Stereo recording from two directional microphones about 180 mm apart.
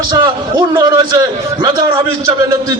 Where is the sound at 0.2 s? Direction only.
25° right (ahead or behind).